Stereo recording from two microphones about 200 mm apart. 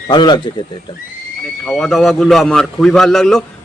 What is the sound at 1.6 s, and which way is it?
A man's voice, centre (ahead or behind).